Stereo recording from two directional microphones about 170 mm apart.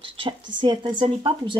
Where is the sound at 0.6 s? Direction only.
25° right (ahead or behind).